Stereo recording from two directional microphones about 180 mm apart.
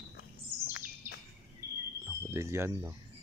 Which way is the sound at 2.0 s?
15° right (ahead or behind).